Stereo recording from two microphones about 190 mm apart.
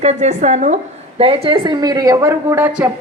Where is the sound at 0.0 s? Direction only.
35° right (ahead or behind).